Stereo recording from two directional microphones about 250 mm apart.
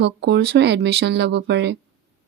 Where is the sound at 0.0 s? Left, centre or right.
Right.